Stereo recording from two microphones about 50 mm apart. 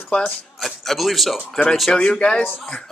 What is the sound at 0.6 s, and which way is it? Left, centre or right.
Speech, centre.